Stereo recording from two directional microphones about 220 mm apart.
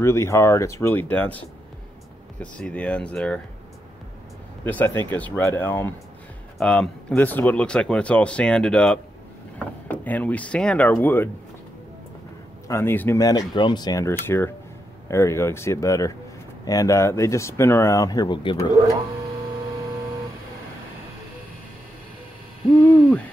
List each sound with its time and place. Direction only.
0.0 s speech: 10° left (ahead or behind)
2.5 s speech: 5° left (ahead or behind)
4.6 s speech: 10° left (ahead or behind)
12.6 s speech: 10° left (ahead or behind)